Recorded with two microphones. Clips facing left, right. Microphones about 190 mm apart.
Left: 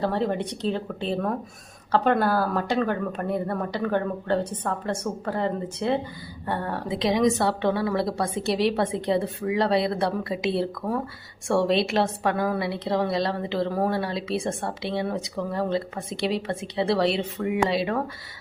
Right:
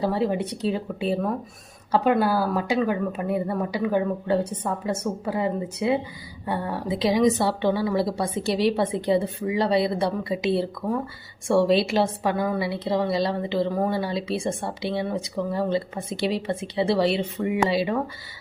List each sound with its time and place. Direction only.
0.0 s speech: 10° right (ahead or behind)
6.9 s a woman's voice: centre (ahead or behind)